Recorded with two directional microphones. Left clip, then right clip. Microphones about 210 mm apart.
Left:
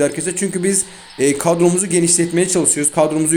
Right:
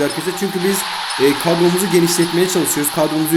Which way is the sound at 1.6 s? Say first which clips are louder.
Even; 5° right (ahead or behind).